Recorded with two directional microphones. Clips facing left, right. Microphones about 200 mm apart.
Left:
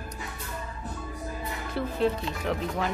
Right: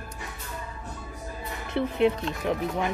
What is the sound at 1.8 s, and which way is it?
Speech, 20° right (ahead or behind).